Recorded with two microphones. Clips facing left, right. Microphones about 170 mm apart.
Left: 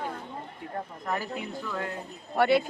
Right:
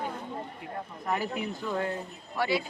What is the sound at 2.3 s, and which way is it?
Speech, 55° left (ahead or behind).